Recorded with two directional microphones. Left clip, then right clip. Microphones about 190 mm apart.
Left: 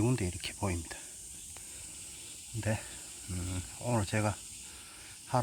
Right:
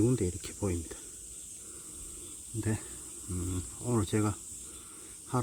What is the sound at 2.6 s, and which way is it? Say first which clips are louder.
Speech: left 1 dB; centre (ahead or behind).